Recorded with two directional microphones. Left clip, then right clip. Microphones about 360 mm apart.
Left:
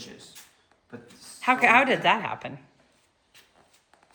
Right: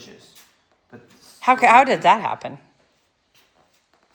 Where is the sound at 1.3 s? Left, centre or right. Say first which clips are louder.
Right 6 dB; centre.